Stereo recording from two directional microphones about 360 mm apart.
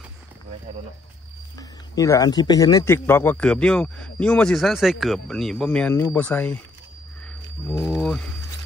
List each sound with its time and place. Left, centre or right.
1.6 s a man's voice: centre
7.7 s a man's voice: centre